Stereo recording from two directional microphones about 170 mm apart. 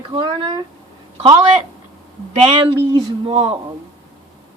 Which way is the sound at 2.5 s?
30° right (ahead or behind).